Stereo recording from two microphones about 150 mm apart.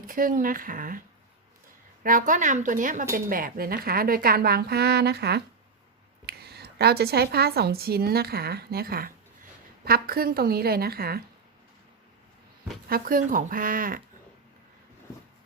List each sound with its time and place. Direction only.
0.1 s speech: 65° right (ahead or behind)
2.0 s speech: 60° right (ahead or behind)
3.2 s a woman's voice: 70° right (ahead or behind); by 11.2 s 90° right
12.9 s speech: 70° right (ahead or behind)